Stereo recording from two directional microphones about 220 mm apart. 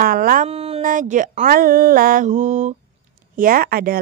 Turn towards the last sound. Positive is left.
turn(degrees=-40)  # may be behind; listen again after turning